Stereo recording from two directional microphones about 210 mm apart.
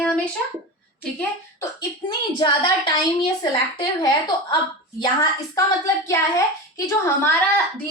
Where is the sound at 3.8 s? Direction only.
20° left (ahead or behind).